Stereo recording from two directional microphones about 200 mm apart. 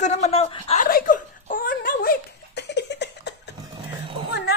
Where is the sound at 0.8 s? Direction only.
45° left (ahead or behind).